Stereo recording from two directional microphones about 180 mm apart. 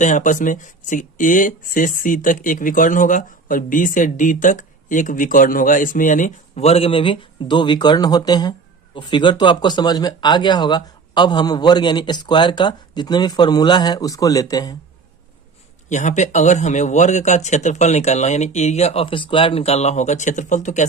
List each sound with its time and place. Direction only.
0.0 s speech: 45° left (ahead or behind); by 14.8 s 20° left (ahead or behind)
15.9 s speech: 40° left (ahead or behind)